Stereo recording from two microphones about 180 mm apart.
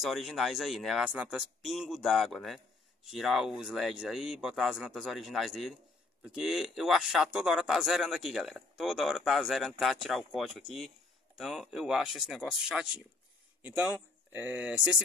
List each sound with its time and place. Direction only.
0.0 s speech: centre (ahead or behind)